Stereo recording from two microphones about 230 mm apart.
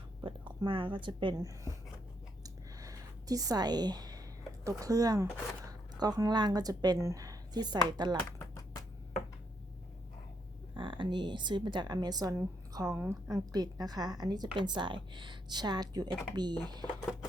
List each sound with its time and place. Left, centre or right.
0.2 s speech: centre
2.4 s a sound: centre
4.6 s speech: centre
8.2 s typing: centre
10.8 s a woman's voice: right